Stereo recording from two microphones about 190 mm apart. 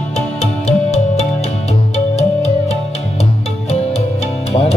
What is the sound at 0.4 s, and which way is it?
Music, 35° left (ahead or behind).